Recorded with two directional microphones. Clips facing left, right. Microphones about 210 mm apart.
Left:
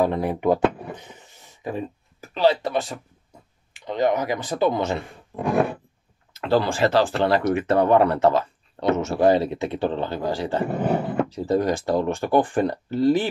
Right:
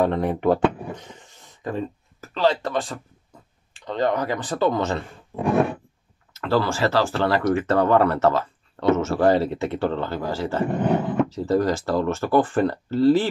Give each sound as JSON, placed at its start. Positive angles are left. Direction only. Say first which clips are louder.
{"t": 0.0, "sound": "speech", "louder": "right 1 dB", "side_deg": 5}
{"t": 3.8, "sound": "speech", "louder": "left 1 dB", "side_deg": 15}
{"t": 5.3, "sound": "a sound", "louder": "right 1 dB", "side_deg": 0}
{"t": 6.4, "sound": "speech", "louder": "left 1 dB", "side_deg": 15}